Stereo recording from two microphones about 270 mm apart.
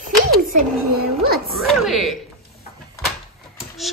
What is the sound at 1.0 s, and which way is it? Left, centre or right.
Music, right.